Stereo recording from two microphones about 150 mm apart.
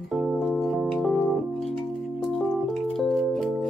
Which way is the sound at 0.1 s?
Centre (ahead or behind).